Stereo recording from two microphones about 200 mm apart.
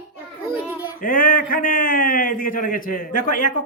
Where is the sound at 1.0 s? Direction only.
45° left (ahead or behind).